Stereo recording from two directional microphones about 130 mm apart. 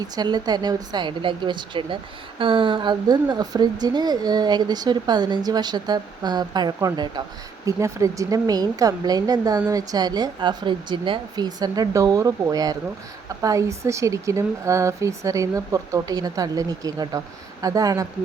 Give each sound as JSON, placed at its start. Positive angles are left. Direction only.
{"t": 0.0, "sound": "a woman's voice", "side_deg": -30}